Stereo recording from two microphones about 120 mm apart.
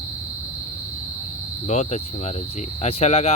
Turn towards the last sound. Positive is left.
turn(degrees=60)  # may be behind; listen again after turning